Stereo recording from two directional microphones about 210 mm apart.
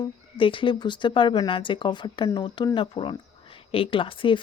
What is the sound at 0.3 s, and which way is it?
A woman's voice, 25° left (ahead or behind).